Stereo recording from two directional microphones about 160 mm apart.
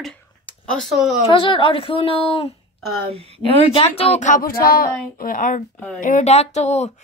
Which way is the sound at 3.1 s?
40° right (ahead or behind).